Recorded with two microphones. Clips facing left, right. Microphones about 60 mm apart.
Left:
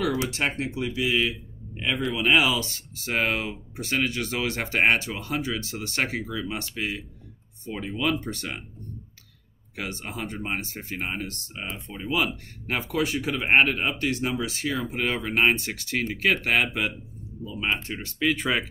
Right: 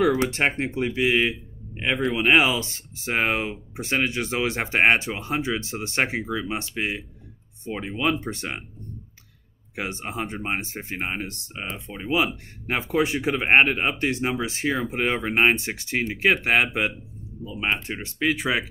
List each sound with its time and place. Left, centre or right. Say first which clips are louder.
0.3 s speech: right 4 dB; right
9.8 s speech: right 3 dB; right
18.2 s speech: right 1 dB; centre